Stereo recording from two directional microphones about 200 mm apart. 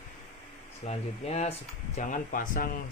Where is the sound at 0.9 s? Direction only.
30° left (ahead or behind).